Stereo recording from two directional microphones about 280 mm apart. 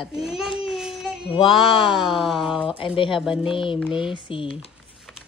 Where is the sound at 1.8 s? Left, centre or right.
Centre.